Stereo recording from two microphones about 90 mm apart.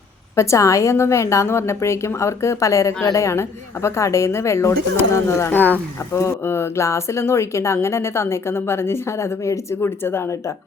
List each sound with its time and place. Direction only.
0.3 s a woman's voice: 35° left (ahead or behind)